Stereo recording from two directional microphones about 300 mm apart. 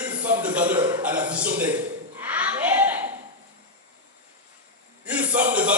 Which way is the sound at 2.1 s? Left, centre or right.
Centre.